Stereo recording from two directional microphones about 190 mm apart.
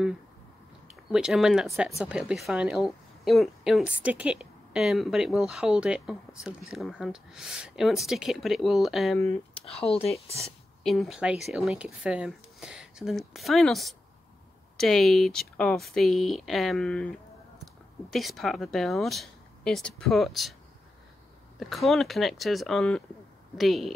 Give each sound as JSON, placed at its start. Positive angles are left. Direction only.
{"t": 0.8, "sound": "a woman's voice", "side_deg": -5}
{"t": 9.7, "sound": "speech", "side_deg": 30}
{"t": 10.8, "sound": "a woman's voice", "side_deg": 0}
{"t": 18.1, "sound": "a woman's voice", "side_deg": 0}
{"t": 21.5, "sound": "a woman's voice", "side_deg": 0}